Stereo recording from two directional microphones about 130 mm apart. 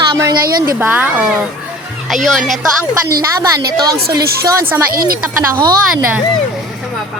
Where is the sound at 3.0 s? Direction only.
25° right (ahead or behind).